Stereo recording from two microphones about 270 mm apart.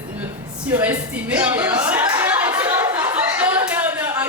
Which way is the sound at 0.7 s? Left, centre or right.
Centre.